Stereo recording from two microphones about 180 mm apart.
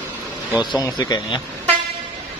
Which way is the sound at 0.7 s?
20° left (ahead or behind).